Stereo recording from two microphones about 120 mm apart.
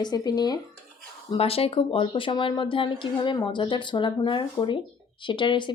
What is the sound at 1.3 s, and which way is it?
Speech, 55° left (ahead or behind).